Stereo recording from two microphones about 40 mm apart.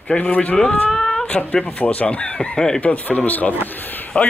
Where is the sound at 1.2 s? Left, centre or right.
Left.